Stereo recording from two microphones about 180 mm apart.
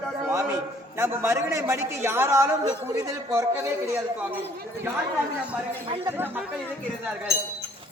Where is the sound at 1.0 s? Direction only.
15° right (ahead or behind).